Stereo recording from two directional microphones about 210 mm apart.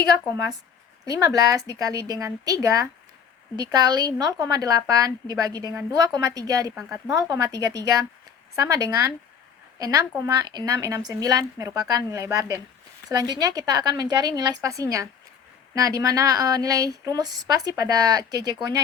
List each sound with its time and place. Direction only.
1.0 s a woman's voice: 15° right (ahead or behind)